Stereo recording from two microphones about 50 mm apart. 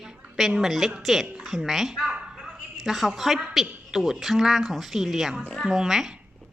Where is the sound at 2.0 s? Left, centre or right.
Centre.